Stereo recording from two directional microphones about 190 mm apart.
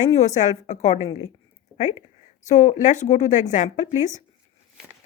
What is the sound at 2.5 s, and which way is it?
Speech, 40° left (ahead or behind).